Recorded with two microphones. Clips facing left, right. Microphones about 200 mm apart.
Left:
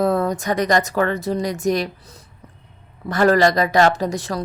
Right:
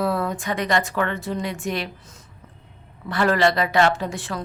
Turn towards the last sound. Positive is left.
turn(degrees=40)  # may be behind; listen again after turning